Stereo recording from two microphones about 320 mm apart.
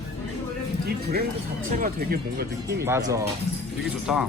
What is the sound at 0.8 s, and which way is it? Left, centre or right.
Speech, right.